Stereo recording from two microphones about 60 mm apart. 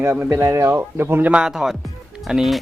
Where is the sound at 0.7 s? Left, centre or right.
Right.